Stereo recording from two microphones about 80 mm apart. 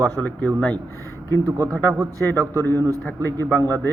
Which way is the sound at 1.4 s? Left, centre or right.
Right.